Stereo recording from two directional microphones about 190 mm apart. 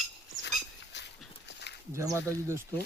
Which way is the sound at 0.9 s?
65° left (ahead or behind).